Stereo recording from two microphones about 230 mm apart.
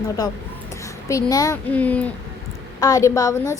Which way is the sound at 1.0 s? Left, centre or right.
Centre.